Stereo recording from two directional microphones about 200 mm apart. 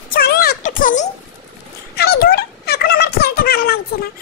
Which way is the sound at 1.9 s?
50° left (ahead or behind).